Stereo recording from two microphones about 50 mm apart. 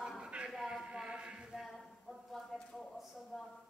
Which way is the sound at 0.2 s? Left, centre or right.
Centre.